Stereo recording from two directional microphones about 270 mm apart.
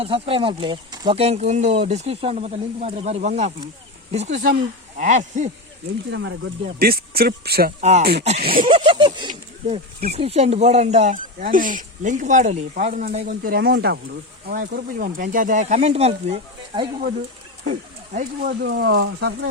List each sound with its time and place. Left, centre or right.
0.0 s speech: centre
6.1 s speech: right
8.7 s speech: centre
18.1 s speech: right